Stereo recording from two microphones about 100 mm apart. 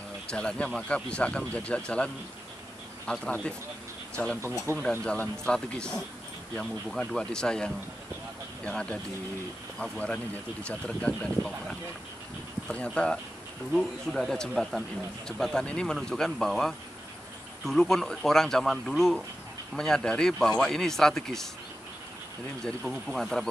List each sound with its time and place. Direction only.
0.3 s speech: 10° left (ahead or behind)
3.1 s speech: 10° left (ahead or behind)
4.7 s speech: 30° right (ahead or behind)
5.0 s a man's voice: 15° left (ahead or behind)
22.6 s a man's voice: 5° left (ahead or behind)